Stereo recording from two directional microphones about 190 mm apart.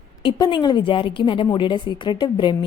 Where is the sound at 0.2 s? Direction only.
25° left (ahead or behind).